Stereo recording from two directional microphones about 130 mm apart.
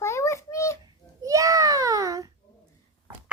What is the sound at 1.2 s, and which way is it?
A child's voice, 25° right (ahead or behind).